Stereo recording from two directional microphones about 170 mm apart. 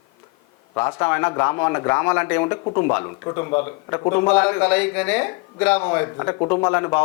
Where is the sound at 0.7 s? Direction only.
15° left (ahead or behind).